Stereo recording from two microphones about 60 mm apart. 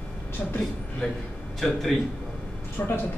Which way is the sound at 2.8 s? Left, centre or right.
Left.